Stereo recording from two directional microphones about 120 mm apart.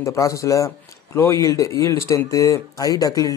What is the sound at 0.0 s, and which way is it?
Speech, 25° left (ahead or behind).